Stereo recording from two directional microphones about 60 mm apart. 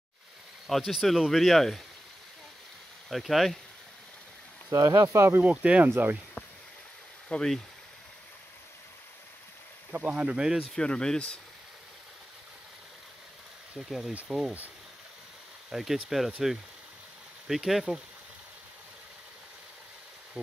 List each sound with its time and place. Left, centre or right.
0.7 s speech: centre
3.1 s speech: centre
4.6 s speech: right
5.4 s speech: right
7.2 s speech: centre
9.9 s speech: right
10.7 s speech: centre
13.7 s speech: centre
15.7 s speech: centre